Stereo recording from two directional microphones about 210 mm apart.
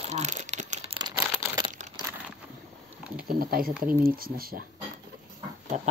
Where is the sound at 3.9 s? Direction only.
45° right (ahead or behind).